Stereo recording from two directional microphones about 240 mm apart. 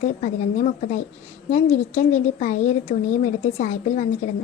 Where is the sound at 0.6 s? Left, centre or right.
Left.